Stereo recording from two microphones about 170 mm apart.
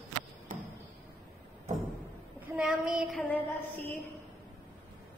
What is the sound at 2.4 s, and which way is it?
Child singing, 5° right (ahead or behind).